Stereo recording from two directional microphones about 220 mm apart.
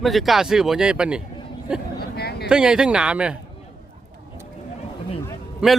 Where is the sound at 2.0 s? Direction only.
45° left (ahead or behind).